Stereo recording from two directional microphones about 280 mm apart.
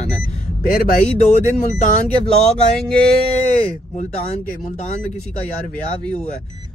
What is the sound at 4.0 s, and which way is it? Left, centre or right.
Speech, left.